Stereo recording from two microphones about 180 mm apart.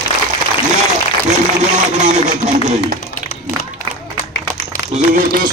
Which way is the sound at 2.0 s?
40° right (ahead or behind).